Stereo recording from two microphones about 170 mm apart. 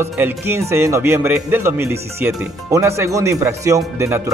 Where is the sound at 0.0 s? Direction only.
15° right (ahead or behind).